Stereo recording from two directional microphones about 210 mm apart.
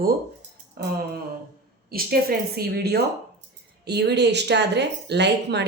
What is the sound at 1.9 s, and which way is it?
Speech, 45° right (ahead or behind).